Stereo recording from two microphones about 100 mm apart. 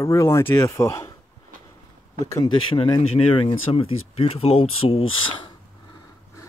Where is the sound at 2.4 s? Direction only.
60° left (ahead or behind).